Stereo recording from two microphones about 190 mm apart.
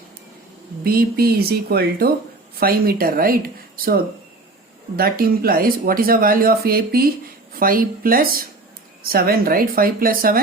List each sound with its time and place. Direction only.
0.9 s speech: 55° right (ahead or behind)
4.9 s speech: 55° right (ahead or behind)